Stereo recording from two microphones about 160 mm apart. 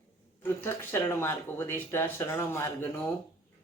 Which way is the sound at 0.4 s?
15° left (ahead or behind).